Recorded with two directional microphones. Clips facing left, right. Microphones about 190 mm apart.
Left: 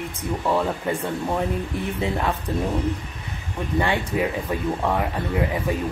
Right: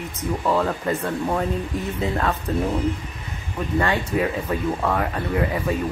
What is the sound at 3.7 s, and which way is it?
Speech, 15° left (ahead or behind).